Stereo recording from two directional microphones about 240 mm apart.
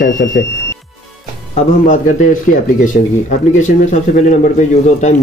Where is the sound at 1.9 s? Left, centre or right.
Left.